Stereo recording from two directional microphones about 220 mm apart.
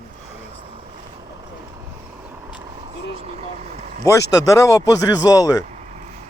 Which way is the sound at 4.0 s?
15° left (ahead or behind).